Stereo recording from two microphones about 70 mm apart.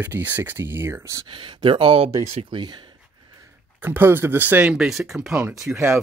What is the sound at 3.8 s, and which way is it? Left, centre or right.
Speech, right.